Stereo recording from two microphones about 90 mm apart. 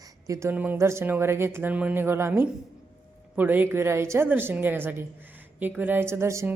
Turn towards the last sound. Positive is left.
turn(degrees=-30)  # may be behind; listen again after turning